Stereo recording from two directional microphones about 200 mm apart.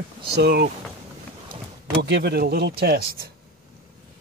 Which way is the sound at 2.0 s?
55° right (ahead or behind).